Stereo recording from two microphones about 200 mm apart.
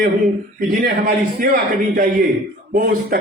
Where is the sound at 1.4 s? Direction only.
45° right (ahead or behind).